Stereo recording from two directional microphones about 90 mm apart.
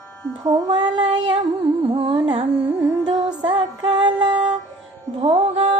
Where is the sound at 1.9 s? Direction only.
85° right.